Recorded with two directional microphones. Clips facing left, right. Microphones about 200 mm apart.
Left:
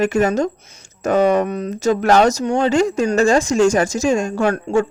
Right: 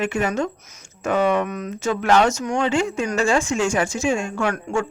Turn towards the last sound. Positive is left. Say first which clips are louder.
# left 6 dB
turn(degrees=35)  # may be behind; listen again after turning